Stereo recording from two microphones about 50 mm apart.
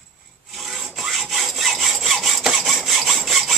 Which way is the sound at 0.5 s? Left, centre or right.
Centre.